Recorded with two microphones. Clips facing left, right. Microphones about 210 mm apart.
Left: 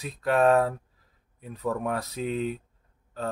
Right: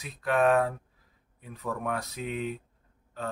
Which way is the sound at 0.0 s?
35° left (ahead or behind).